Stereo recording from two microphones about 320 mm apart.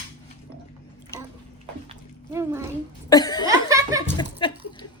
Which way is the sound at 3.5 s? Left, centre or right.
Centre.